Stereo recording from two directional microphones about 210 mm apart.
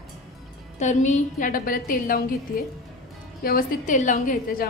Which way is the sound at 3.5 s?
40° left (ahead or behind).